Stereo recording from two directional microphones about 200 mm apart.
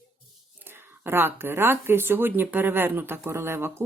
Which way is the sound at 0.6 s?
10° right (ahead or behind).